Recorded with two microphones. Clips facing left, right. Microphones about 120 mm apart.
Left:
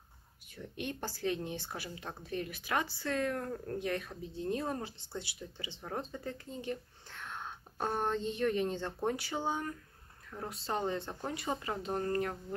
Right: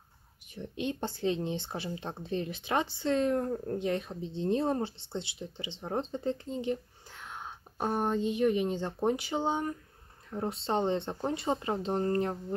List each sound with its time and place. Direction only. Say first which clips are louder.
0.5 s speech: right 6 dB; 20° right (ahead or behind)